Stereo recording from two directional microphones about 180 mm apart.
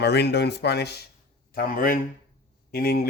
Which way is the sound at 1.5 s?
50° left (ahead or behind).